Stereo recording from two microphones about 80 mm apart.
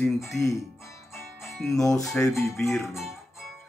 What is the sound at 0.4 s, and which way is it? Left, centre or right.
Speech, left.